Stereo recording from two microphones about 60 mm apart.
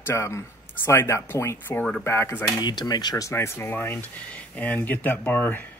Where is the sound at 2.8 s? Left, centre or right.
Left.